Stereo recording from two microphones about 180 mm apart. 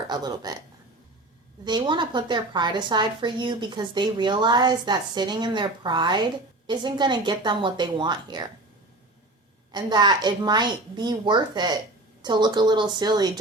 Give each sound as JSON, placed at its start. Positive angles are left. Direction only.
{"t": 0.1, "sound": "a woman's voice", "side_deg": -20}
{"t": 1.6, "sound": "a woman's voice", "side_deg": -25}
{"t": 9.7, "sound": "a woman's voice", "side_deg": -25}